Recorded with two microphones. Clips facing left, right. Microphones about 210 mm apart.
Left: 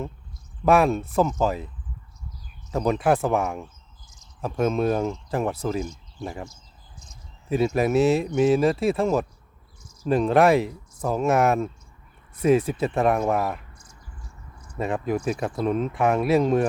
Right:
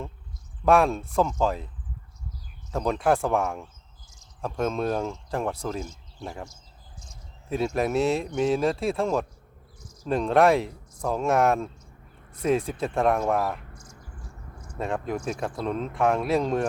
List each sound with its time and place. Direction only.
0.6 s speech: 5° left (ahead or behind)
2.7 s speech: 5° left (ahead or behind)
7.5 s speech: centre (ahead or behind)
13.9 s a sound: 50° right (ahead or behind)
14.8 s speech: 5° left (ahead or behind)